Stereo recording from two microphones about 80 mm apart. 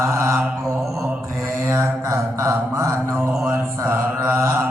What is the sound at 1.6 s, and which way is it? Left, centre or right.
Mantra, right.